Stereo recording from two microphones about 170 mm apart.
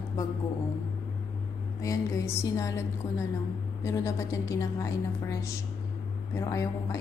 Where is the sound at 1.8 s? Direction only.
20° left (ahead or behind).